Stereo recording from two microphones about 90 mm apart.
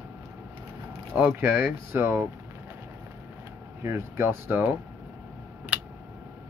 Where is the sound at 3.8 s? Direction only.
30° right (ahead or behind).